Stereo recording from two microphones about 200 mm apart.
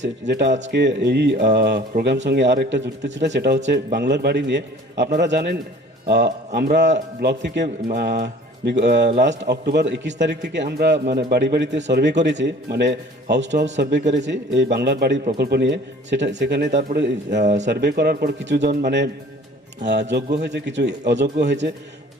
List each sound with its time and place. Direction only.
0.0 s a man's voice: 60° right (ahead or behind)
17.4 s speech: 35° right (ahead or behind)
17.7 s a man's voice: 55° right (ahead or behind)